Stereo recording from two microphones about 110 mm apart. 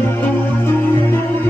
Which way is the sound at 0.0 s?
20° left (ahead or behind).